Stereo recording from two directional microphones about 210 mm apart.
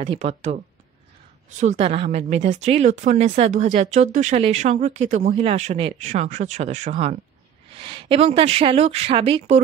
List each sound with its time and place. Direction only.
0.0 s a woman's voice: 30° right (ahead or behind)
1.6 s a woman's voice: 30° right (ahead or behind)